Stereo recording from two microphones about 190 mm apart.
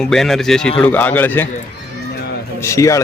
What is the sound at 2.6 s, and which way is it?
Speech, 15° left (ahead or behind).